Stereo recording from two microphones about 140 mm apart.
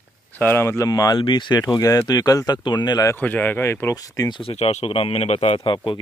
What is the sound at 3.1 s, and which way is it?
Speech, 15° left (ahead or behind).